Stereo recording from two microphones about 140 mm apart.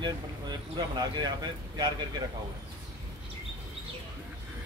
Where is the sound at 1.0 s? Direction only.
30° right (ahead or behind).